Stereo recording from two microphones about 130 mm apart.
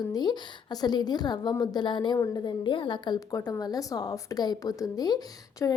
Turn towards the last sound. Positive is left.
turn(degrees=30)  # may be behind; listen again after turning